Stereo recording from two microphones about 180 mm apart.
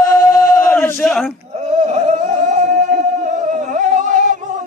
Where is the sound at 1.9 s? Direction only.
40° right (ahead or behind).